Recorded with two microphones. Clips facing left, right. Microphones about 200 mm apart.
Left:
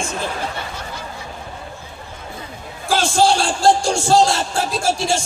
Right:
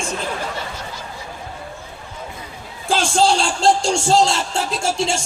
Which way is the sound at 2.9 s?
25° right (ahead or behind).